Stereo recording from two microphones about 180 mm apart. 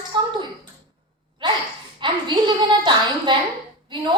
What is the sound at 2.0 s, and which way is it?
A woman's voice, 25° right (ahead or behind).